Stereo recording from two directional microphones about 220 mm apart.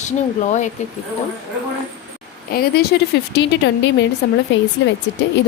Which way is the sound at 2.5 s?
45° left (ahead or behind).